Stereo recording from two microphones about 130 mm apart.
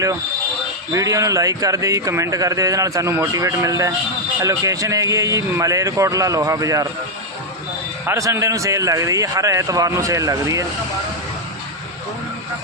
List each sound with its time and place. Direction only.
0.9 s a man's voice: 25° right (ahead or behind)
8.0 s a man's voice: 25° right (ahead or behind)